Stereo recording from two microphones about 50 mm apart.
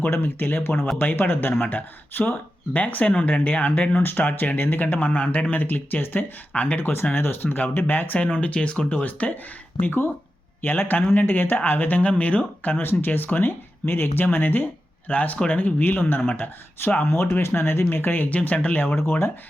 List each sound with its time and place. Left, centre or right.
0.2 s speech: left
6.5 s speech: left
6.7 s speech: left
8.3 s speech: left
9.8 s speech: left
17.1 s speech: left
17.8 s speech: left